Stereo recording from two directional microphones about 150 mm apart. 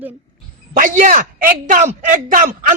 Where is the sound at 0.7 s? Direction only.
60° right (ahead or behind).